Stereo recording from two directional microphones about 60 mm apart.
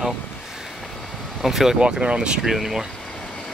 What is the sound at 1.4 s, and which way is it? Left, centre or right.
Speech, centre.